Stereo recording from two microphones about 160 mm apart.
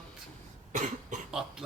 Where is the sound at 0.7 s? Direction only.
50° right (ahead or behind).